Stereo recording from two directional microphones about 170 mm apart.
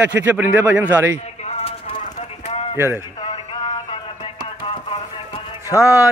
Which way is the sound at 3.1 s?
35° left (ahead or behind).